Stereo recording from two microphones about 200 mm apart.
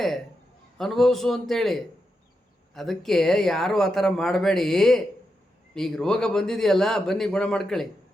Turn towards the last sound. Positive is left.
turn(degrees=0)  # may be behind; listen again after turning